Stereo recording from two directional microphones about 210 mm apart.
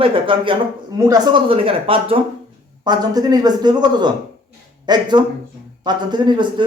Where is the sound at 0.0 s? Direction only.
25° right (ahead or behind).